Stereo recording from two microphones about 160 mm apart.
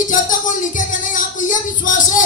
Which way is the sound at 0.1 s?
55° left (ahead or behind).